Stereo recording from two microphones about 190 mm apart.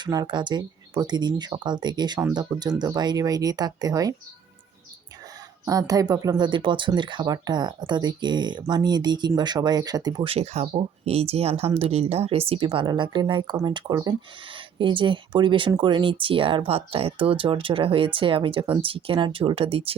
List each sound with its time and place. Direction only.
0.0 s speech: 20° right (ahead or behind)
5.6 s speech: 20° right (ahead or behind)